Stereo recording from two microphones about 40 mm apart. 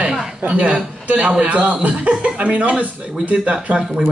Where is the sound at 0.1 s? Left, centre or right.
Centre.